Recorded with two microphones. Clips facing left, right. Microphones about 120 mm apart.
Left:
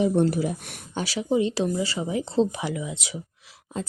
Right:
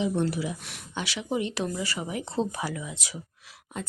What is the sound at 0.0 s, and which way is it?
Speech, 50° left (ahead or behind).